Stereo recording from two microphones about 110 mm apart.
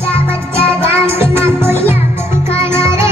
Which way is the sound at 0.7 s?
20° right (ahead or behind).